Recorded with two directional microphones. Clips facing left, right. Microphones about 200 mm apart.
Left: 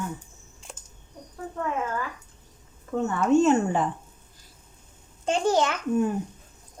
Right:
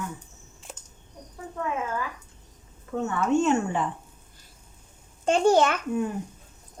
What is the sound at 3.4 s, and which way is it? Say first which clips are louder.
Speech: left 3 dB; 40° left (ahead or behind).